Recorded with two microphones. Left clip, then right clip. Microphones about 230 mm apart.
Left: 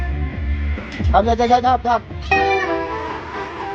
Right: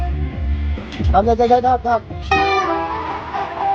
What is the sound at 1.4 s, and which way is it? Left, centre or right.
Speech, left.